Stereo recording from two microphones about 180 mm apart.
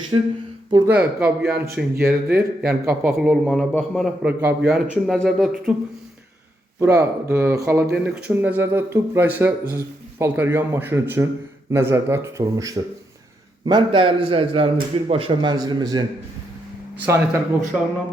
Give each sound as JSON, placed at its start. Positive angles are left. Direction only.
{"t": 0.1, "sound": "a man's voice", "side_deg": -25}
{"t": 0.9, "sound": "a man's voice", "side_deg": -5}
{"t": 4.7, "sound": "a man's voice", "side_deg": 0}
{"t": 6.7, "sound": "a man's voice", "side_deg": -15}
{"t": 17.1, "sound": "speech", "side_deg": -15}